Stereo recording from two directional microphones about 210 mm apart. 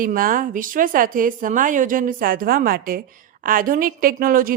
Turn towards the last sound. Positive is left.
turn(degrees=-40)  # may be behind; listen again after turning